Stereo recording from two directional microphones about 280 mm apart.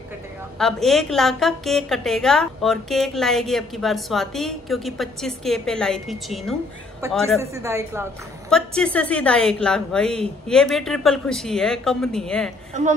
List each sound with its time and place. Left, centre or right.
0.6 s a woman's voice: centre
7.3 s a woman's voice: centre
8.5 s a woman's voice: centre